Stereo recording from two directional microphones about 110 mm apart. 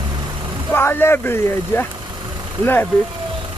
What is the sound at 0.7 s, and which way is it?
Speech, 20° left (ahead or behind).